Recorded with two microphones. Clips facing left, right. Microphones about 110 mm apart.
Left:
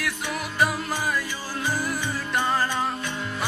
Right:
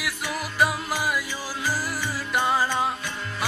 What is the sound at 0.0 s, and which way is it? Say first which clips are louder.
Music: left 1 dB; centre (ahead or behind).